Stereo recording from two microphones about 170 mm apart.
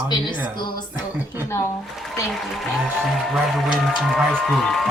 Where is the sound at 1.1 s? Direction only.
10° right (ahead or behind).